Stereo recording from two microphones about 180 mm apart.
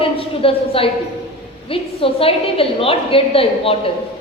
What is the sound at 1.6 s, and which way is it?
A woman's voice, 30° left (ahead or behind).